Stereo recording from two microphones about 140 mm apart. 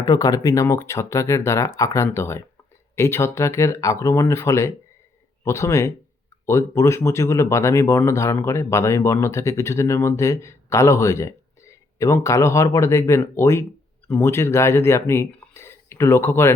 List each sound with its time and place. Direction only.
0.0 s speech: 25° left (ahead or behind)